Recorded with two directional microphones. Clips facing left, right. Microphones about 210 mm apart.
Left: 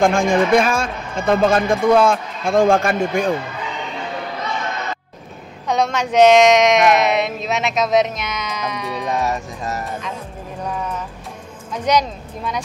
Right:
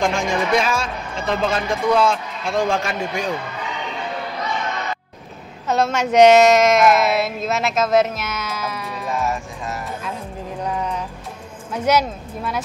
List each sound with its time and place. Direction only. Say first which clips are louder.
0.0 s speech: left 5 dB; 50° left (ahead or behind)
5.7 s speech: even; 5° right (ahead or behind)
9.2 s music: left 2 dB; 40° left (ahead or behind)
11.7 s speech: even; 5° right (ahead or behind)